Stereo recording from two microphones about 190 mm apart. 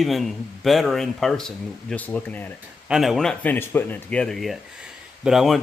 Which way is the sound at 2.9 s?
Centre (ahead or behind).